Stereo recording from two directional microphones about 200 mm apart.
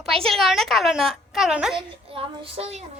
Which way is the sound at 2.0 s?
25° right (ahead or behind).